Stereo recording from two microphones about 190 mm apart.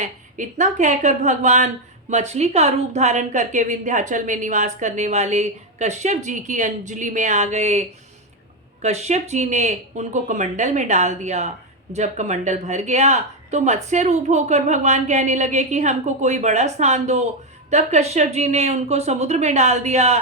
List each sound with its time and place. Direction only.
0.0 s a woman's voice: 40° right (ahead or behind)